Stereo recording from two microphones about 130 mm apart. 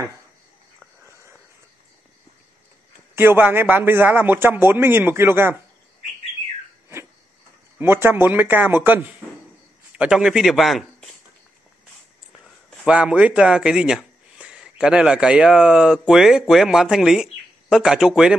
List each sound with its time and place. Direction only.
3.2 s a man's voice: 15° right (ahead or behind)
7.8 s a man's voice: 15° right (ahead or behind); by 11.1 s centre (ahead or behind)
12.8 s a man's voice: 10° right (ahead or behind)